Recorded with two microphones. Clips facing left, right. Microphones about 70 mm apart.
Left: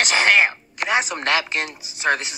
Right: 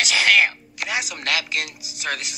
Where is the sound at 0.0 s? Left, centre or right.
Left.